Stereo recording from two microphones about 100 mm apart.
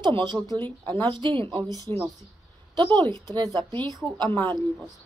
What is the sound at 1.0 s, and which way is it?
Speech, 50° right (ahead or behind).